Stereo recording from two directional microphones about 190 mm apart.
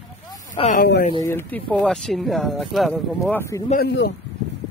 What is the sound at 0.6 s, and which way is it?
Speech, 25° left (ahead or behind).